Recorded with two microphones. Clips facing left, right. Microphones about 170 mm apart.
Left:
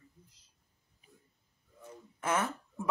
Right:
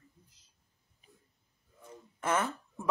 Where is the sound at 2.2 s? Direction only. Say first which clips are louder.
Right 1 dB; 10° left (ahead or behind).